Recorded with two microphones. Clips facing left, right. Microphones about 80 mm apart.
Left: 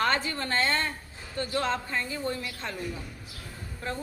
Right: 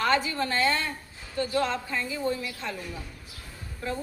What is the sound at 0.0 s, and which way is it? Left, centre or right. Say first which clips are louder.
A woman's voice: right 2 dB; left.